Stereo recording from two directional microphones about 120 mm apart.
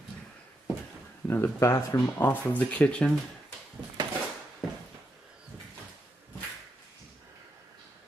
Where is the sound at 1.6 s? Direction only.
25° left (ahead or behind); by 3.1 s 10° left (ahead or behind).